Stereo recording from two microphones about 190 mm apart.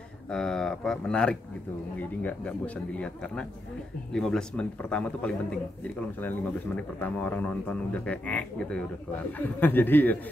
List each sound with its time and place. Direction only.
0.3 s a man's voice: 5° left (ahead or behind)